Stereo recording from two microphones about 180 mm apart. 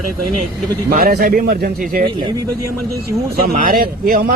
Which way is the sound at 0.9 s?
55° right (ahead or behind).